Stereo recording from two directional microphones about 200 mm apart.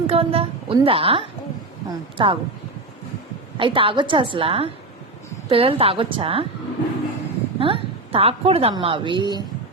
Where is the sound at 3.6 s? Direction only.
25° right (ahead or behind).